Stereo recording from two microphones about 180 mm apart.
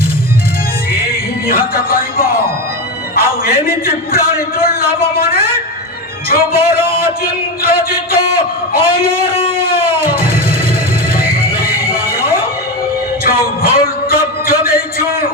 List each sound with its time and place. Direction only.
1.5 s music: 55° left (ahead or behind)
3.2 s a sound: 55° left (ahead or behind)
6.2 s a man's voice: 55° left (ahead or behind)
9.6 s music: 55° left (ahead or behind)
11.5 s music: 55° left (ahead or behind)